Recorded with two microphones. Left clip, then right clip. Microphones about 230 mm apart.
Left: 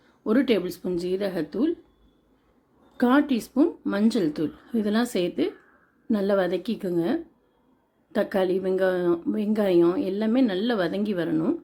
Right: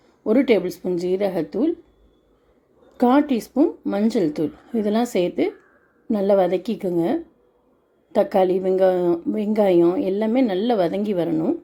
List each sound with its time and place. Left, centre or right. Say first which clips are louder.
0.3 s a woman's voice: right 5 dB; centre
3.0 s a woman's voice: right 4 dB; centre